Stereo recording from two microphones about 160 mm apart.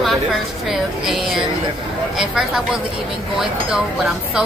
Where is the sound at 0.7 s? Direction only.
Centre (ahead or behind).